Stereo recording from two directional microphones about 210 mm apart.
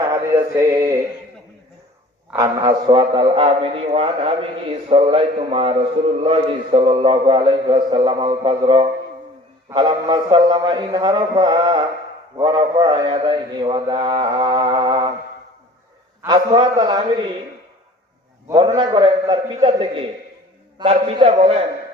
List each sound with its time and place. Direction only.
0.7 s music: 15° right (ahead or behind)
2.3 s a man's voice: 20° right (ahead or behind)
16.2 s a man's voice: 20° right (ahead or behind)
18.5 s a man's voice: 20° right (ahead or behind)